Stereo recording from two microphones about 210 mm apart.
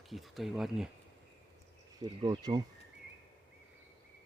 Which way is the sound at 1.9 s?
20° right (ahead or behind).